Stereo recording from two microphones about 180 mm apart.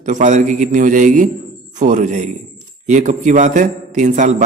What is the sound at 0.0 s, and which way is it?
A man's voice, 45° right (ahead or behind).